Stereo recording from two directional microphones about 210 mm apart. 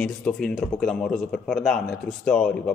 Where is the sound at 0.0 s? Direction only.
Centre (ahead or behind).